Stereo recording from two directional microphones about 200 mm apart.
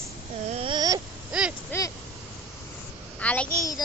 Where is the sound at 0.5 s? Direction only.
25° right (ahead or behind).